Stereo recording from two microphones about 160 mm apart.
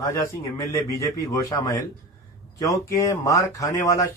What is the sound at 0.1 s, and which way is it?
Speech, 20° left (ahead or behind).